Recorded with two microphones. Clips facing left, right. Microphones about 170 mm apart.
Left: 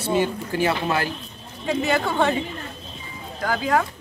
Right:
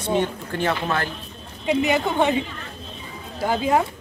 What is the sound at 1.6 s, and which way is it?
Speech, 15° right (ahead or behind).